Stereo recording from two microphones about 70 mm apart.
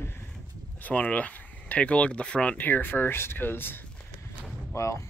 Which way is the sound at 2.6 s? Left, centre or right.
Left.